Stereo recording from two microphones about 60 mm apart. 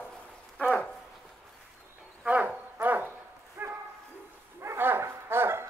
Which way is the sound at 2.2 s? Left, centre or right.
Right.